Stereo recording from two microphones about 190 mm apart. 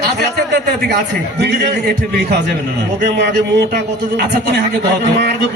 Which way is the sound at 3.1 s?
55° right (ahead or behind).